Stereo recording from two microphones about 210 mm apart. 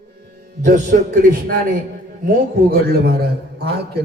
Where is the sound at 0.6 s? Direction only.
40° right (ahead or behind).